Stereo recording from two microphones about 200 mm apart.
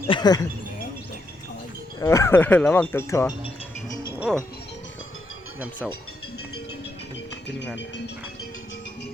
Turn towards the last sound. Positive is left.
turn(degrees=60)  # may be behind; listen again after turning